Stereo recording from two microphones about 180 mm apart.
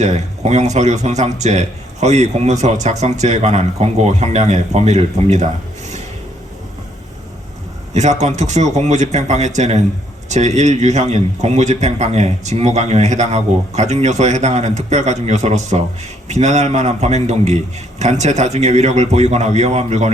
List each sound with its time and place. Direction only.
0.0 s a man's voice: 40° right (ahead or behind)
7.9 s a man's voice: 40° right (ahead or behind)